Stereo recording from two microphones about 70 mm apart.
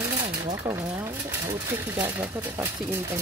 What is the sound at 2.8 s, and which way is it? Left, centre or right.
Speech, right.